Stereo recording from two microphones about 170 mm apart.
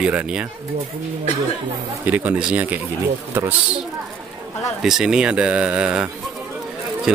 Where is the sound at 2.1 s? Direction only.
10° right (ahead or behind).